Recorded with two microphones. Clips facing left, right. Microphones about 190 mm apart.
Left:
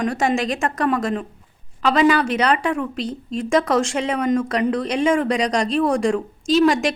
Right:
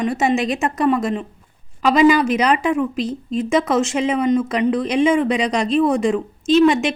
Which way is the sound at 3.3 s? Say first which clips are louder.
Right 1 dB; 5° right (ahead or behind).